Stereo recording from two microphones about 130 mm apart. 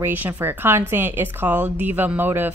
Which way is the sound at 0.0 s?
15° right (ahead or behind).